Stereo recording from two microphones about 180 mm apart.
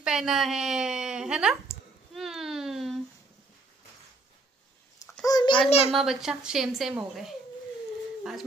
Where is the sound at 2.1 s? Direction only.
Centre (ahead or behind).